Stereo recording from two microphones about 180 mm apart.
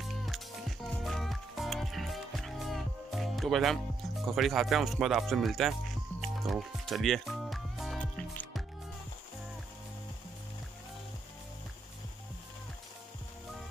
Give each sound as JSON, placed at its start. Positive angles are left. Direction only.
{"t": 0.0, "sound": "music", "side_deg": 0}